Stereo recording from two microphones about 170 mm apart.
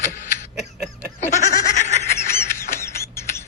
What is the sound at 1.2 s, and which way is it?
Goat, 45° left (ahead or behind).